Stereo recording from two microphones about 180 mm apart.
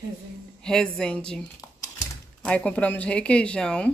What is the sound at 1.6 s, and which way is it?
Typing, 20° left (ahead or behind).